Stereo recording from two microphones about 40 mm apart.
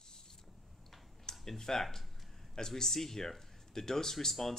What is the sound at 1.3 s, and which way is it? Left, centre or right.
Speech, centre.